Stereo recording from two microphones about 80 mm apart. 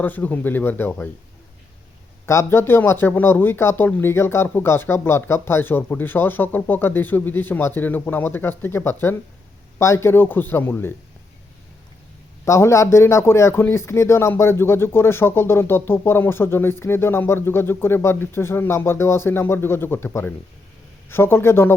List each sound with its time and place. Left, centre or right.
0.0 s speech: left
2.2 s speech: left
12.5 s speech: left